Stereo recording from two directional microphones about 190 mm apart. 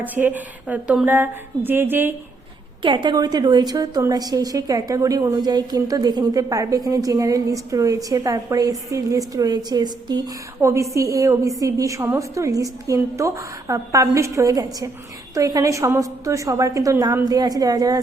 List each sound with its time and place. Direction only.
0.0 s a woman's voice: 10° right (ahead or behind)
2.8 s a woman's voice: 25° right (ahead or behind)